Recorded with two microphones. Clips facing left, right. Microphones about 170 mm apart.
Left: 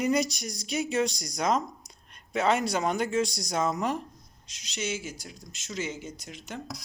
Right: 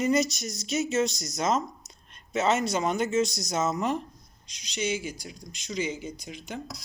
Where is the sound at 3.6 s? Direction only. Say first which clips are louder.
Right 1 dB; 10° left (ahead or behind).